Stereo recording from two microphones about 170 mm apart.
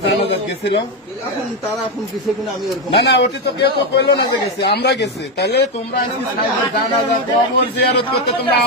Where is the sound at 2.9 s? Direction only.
80° left.